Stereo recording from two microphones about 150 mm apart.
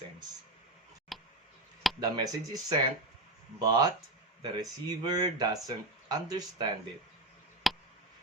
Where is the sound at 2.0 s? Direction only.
25° right (ahead or behind).